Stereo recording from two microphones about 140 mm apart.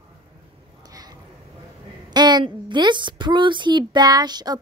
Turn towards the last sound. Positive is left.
turn(degrees=-30)  # may be behind; listen again after turning